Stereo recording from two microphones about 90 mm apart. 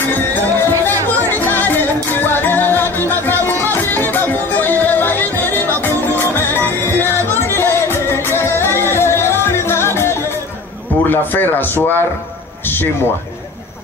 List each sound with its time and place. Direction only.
0.1 s music: 25° left (ahead or behind)
11.1 s a man's voice: 20° left (ahead or behind)